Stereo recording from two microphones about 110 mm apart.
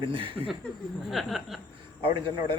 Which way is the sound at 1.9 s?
50° right (ahead or behind).